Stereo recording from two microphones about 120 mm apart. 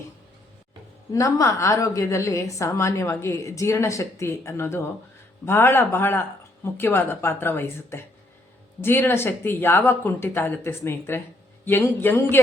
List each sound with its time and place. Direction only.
1.1 s a woman's voice: 25° left (ahead or behind)